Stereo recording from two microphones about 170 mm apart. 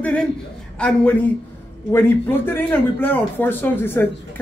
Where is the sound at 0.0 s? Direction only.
5° left (ahead or behind).